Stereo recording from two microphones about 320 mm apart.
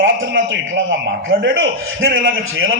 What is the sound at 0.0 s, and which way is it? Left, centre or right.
A man's voice, right.